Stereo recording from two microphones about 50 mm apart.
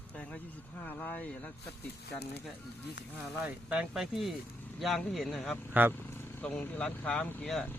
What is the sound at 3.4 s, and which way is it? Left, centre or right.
Speech, right.